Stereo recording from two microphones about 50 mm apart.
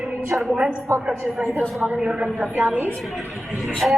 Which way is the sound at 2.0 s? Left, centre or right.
Centre.